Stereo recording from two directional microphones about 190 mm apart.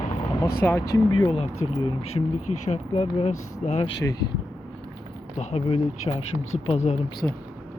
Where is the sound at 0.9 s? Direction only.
25° left (ahead or behind).